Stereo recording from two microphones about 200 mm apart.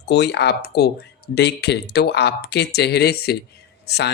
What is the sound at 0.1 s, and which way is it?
Speech, 55° left (ahead or behind).